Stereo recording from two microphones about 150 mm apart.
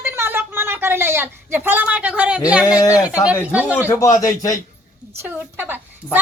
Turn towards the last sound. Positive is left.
turn(degrees=-15)  # may be behind; listen again after turning